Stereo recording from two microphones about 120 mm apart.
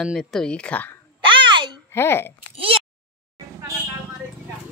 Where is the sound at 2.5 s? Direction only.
50° right (ahead or behind).